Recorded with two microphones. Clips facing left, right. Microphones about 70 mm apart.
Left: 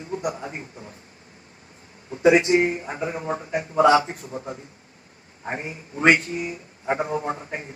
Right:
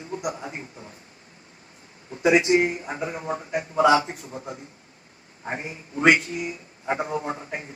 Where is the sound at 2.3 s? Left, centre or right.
Left.